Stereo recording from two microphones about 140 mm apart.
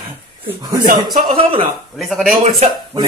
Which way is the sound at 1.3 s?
40° right (ahead or behind).